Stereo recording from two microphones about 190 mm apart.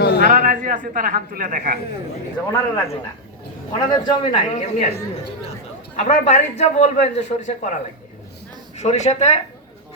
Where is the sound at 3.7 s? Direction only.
20° left (ahead or behind).